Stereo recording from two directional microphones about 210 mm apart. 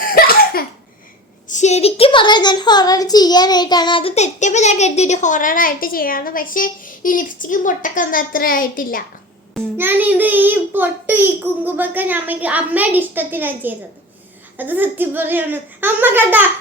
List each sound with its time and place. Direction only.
0.0 s laughter: 45° left (ahead or behind)
1.5 s a woman's voice: 35° left (ahead or behind)
9.7 s a child's voice: 10° right (ahead or behind)